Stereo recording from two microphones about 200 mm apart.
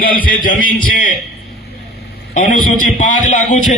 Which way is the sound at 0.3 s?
45° left (ahead or behind).